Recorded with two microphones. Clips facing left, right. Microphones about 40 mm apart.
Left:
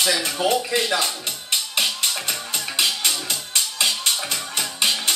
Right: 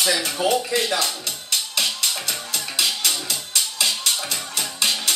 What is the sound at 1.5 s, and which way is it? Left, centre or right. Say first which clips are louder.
Music: left 1 dB; left.